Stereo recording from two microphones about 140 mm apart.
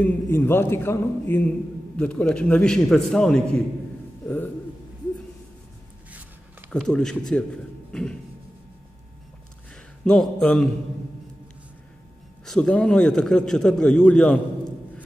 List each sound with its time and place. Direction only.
0.0 s a man's voice: 15° left (ahead or behind)
6.7 s a man's voice: 5° left (ahead or behind)
7.9 s a sound: 5° left (ahead or behind)
10.0 s a man's voice: 5° left (ahead or behind)
12.4 s a man's voice: 5° left (ahead or behind)